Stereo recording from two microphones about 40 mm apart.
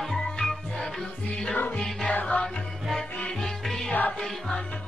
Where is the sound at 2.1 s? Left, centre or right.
Left.